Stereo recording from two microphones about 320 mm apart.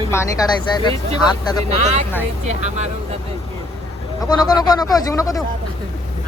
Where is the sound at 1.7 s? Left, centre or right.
Right.